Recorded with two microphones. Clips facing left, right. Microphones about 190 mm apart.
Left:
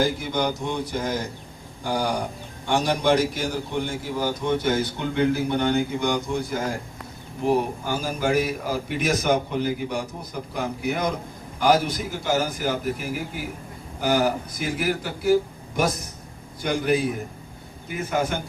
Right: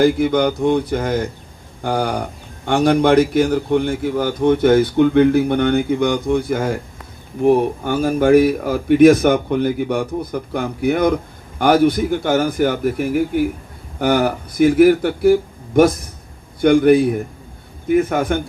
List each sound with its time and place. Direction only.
0.0 s a man's voice: 60° right (ahead or behind)